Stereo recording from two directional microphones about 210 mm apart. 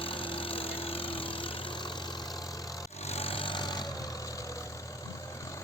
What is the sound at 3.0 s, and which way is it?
Vehicle, 30° left (ahead or behind).